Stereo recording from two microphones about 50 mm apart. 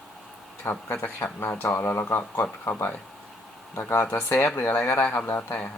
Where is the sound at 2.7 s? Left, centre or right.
Left.